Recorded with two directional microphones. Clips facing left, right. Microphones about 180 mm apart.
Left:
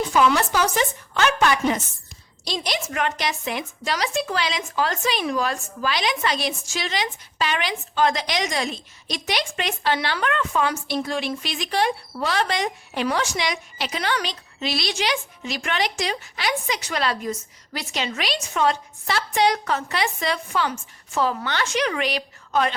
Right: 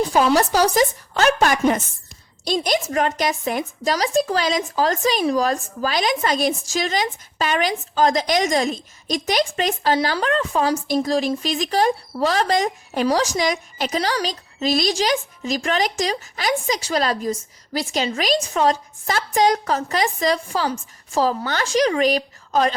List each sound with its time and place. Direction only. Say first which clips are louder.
0.0 s a woman's voice: right 3 dB; 35° right (ahead or behind)